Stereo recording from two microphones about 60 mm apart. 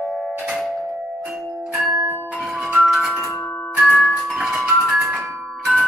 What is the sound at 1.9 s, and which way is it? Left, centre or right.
Bell, right.